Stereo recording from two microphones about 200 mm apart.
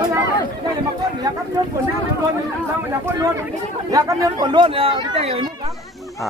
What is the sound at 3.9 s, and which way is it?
Speech, 20° right (ahead or behind).